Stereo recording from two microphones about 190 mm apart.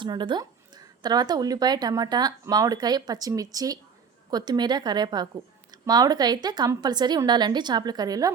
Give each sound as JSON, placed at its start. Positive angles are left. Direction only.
{"t": 0.0, "sound": "speech", "side_deg": -25}